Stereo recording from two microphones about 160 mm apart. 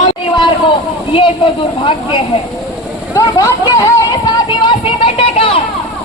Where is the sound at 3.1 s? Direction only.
20° left (ahead or behind).